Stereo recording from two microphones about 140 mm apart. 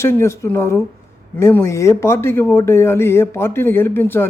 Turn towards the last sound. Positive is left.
turn(degrees=15)  # may be behind; listen again after turning